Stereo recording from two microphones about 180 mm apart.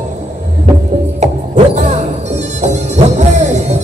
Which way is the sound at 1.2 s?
40° right (ahead or behind).